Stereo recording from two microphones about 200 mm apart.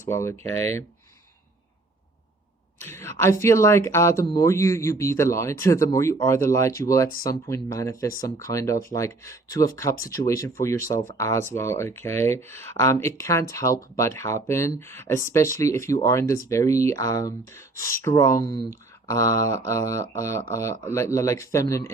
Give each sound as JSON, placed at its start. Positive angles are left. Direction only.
{"t": 0.0, "sound": "speech", "side_deg": 15}
{"t": 2.8, "sound": "speech", "side_deg": 10}